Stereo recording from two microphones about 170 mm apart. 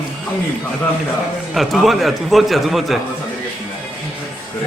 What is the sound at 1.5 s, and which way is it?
A man's voice, centre (ahead or behind).